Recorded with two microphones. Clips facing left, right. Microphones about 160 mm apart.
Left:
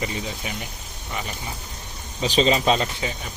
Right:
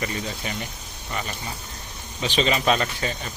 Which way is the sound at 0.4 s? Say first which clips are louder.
Right 1 dB; 10° left (ahead or behind).